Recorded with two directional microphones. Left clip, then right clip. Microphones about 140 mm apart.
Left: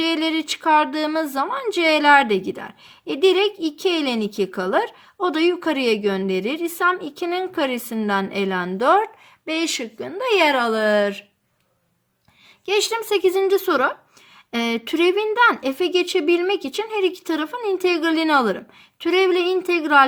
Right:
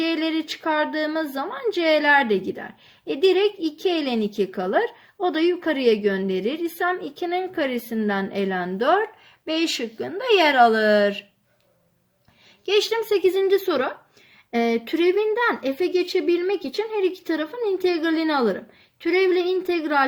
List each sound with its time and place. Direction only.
0.0 s speech: 55° left (ahead or behind)
9.5 s speech: 35° left (ahead or behind)
12.6 s a woman's voice: 45° left (ahead or behind)